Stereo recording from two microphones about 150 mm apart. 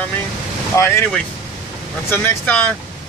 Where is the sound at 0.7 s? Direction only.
15° left (ahead or behind).